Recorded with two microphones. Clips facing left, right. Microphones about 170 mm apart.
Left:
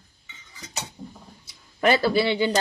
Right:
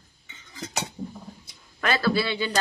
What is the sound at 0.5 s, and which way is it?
Cutlery, 65° right (ahead or behind).